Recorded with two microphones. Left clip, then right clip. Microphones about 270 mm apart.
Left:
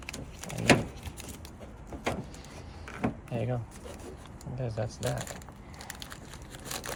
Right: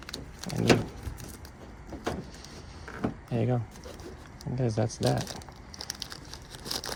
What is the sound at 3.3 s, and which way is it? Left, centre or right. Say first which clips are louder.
Drawer open or close: right 8 dB; centre.